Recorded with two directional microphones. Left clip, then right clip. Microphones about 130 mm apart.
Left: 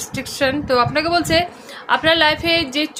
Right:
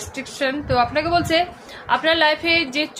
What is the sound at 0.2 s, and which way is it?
Speech, 45° left (ahead or behind).